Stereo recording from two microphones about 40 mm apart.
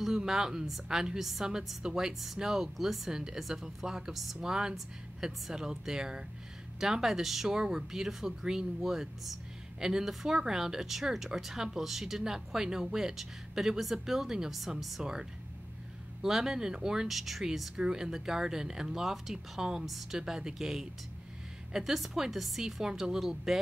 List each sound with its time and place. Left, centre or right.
0.0 s speech: centre
14.8 s a woman's voice: centre
16.2 s a woman's voice: centre
20.2 s a woman's voice: centre